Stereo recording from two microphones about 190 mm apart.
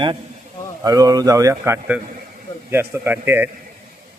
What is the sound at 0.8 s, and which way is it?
A man's voice, 20° right (ahead or behind).